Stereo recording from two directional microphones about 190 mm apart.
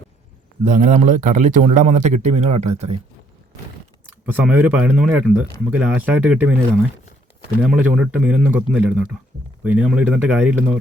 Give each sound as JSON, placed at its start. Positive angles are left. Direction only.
{"t": 0.6, "sound": "speech", "side_deg": -40}
{"t": 4.3, "sound": "speech", "side_deg": -10}
{"t": 7.6, "sound": "speech", "side_deg": -5}